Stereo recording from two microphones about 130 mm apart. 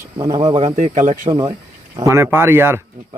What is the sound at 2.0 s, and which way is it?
Speech, 20° right (ahead or behind).